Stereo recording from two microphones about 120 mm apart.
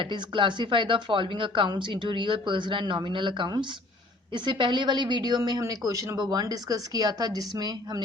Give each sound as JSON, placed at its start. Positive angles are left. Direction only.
{"t": 0.0, "sound": "a woman's voice", "side_deg": -40}